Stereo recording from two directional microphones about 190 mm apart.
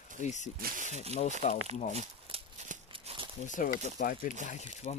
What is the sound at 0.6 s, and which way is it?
Speech, 40° right (ahead or behind).